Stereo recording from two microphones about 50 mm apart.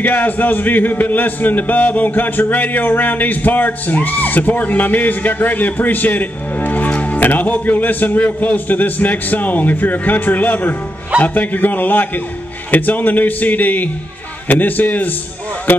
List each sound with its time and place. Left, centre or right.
0.0 s speech: left